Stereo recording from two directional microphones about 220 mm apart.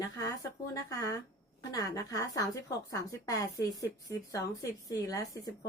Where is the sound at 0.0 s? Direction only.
15° left (ahead or behind).